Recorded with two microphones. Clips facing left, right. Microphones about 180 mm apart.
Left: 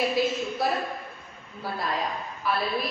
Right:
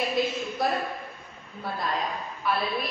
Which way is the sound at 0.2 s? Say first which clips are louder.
Even; centre (ahead or behind).